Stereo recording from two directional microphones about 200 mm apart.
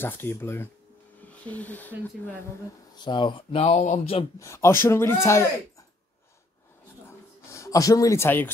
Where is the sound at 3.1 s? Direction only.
25° left (ahead or behind).